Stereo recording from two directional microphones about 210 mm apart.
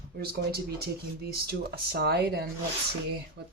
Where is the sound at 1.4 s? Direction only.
50° right (ahead or behind).